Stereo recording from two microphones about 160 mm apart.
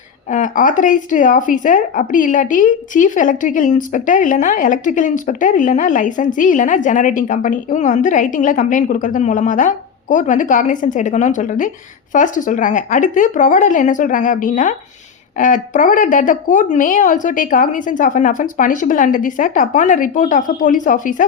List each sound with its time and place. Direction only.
0.3 s a woman's voice: 50° left (ahead or behind)